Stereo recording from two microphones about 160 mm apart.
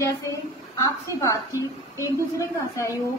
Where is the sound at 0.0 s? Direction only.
20° left (ahead or behind).